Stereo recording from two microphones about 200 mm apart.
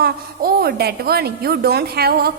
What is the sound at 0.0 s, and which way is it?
A woman's voice, 50° right (ahead or behind).